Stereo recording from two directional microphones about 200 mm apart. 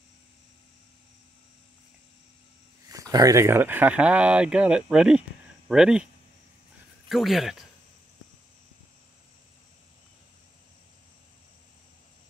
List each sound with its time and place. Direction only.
2.9 s speech: 15° right (ahead or behind)
7.1 s speech: centre (ahead or behind)